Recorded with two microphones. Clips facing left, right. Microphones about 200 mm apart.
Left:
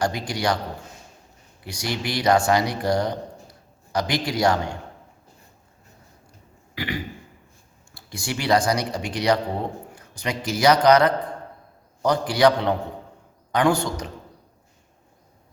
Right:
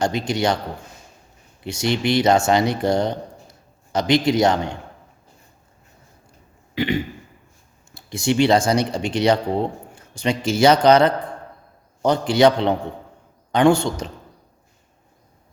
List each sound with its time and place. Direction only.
0.0 s speech: 25° right (ahead or behind)
1.6 s speech: 25° right (ahead or behind)
6.7 s throat clearing: 25° right (ahead or behind)
7.9 s a man's voice: 25° right (ahead or behind)